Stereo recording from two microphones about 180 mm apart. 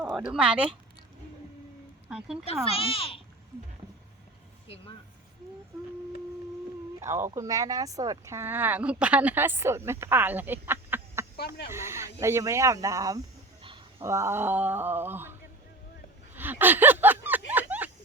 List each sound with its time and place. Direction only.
0.1 s speech: 5° right (ahead or behind)
2.0 s speech: 5° right (ahead or behind)
2.6 s a child's voice: 30° left (ahead or behind)
7.0 s speech: 15° right (ahead or behind)
11.3 s speech: 60° left (ahead or behind)
11.7 s speech: 15° right (ahead or behind)
14.0 s speech: 15° right (ahead or behind)
16.3 s a sound: 10° right (ahead or behind)